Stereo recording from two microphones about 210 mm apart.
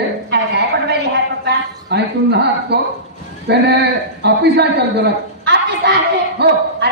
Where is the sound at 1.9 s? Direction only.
55° right (ahead or behind).